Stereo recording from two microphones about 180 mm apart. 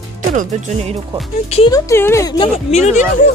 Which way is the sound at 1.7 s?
15° left (ahead or behind).